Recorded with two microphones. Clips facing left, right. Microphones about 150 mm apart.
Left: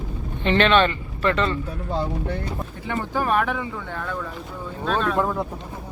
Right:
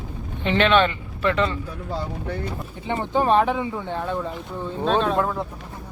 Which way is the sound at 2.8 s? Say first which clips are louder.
Right 4 dB; 20° right (ahead or behind).